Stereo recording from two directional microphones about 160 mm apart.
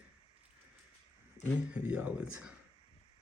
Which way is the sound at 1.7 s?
10° right (ahead or behind).